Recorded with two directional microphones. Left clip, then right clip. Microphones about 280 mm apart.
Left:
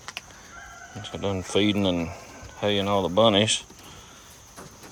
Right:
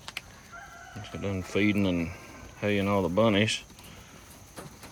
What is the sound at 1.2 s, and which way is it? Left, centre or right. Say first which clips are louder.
Speech: left 4 dB; centre.